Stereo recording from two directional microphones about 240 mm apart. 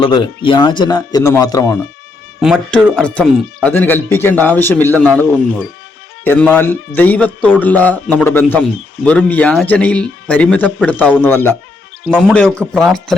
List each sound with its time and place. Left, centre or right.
0.0 s speech: centre
2.4 s speech: centre